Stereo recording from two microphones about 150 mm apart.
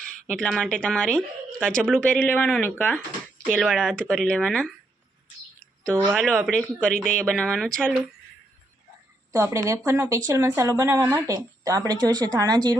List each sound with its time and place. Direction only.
0.3 s speech: 5° left (ahead or behind)
6.1 s speech: 5° left (ahead or behind)
9.3 s speech: 20° right (ahead or behind)